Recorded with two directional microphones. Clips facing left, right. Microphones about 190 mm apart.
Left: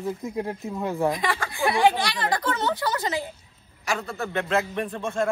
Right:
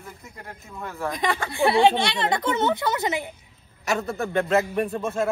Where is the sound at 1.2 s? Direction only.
15° right (ahead or behind).